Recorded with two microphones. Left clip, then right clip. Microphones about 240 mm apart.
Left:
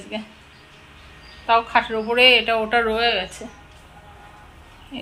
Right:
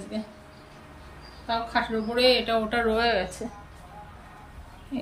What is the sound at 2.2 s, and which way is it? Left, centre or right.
Speech, centre.